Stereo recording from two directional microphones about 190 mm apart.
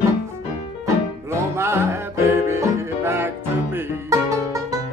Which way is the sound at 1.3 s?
15° right (ahead or behind).